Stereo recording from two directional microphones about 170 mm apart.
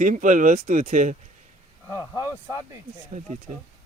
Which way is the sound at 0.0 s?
50° right (ahead or behind).